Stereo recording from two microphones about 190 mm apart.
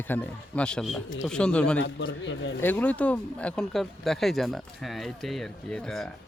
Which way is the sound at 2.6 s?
10° left (ahead or behind).